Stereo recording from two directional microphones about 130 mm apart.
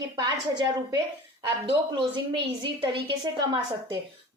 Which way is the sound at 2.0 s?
35° right (ahead or behind).